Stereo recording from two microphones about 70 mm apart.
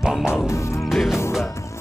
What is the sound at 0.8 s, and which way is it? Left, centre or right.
Music, centre.